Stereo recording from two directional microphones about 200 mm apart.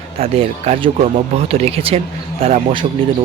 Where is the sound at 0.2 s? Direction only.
30° right (ahead or behind).